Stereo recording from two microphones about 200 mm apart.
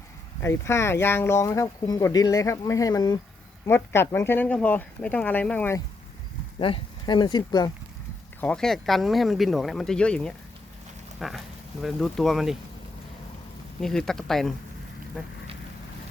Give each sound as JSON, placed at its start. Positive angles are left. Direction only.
{"t": 0.4, "sound": "speech", "side_deg": 15}
{"t": 6.6, "sound": "speech", "side_deg": 25}
{"t": 8.4, "sound": "speech", "side_deg": 5}
{"t": 13.8, "sound": "speech", "side_deg": 5}